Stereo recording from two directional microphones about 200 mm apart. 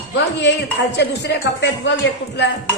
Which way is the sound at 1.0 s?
55° left (ahead or behind).